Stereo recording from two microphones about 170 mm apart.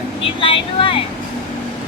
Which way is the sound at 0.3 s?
30° left (ahead or behind).